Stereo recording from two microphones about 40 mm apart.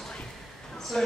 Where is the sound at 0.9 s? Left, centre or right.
Centre.